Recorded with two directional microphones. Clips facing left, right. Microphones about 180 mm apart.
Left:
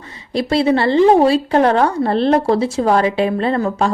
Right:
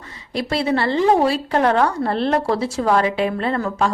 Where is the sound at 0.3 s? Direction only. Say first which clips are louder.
Left 5 dB; 25° left (ahead or behind).